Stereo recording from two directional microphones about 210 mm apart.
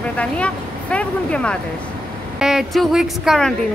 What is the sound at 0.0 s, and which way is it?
A woman's voice, 5° left (ahead or behind).